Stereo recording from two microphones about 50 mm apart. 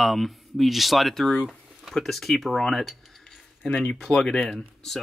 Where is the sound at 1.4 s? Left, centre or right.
Centre.